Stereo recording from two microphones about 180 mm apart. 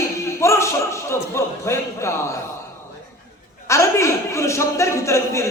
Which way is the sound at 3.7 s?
15° left (ahead or behind).